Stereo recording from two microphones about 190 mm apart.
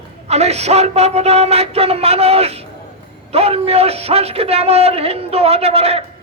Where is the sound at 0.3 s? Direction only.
35° right (ahead or behind).